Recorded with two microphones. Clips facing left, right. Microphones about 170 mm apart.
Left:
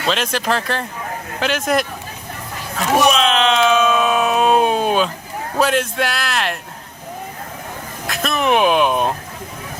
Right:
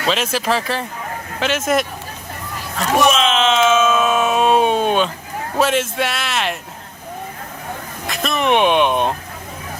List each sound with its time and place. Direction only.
0.0 s a man's voice: centre (ahead or behind)
2.7 s a sound: centre (ahead or behind)
5.5 s a man's voice: centre (ahead or behind)
8.0 s music: centre (ahead or behind)